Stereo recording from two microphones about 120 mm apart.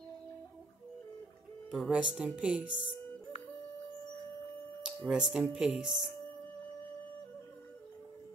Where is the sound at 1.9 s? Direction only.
10° right (ahead or behind).